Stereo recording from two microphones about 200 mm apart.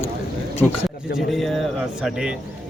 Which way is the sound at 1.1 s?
Centre (ahead or behind).